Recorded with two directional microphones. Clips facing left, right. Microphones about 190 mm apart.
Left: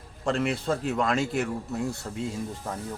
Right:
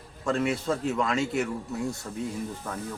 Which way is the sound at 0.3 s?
35° left (ahead or behind).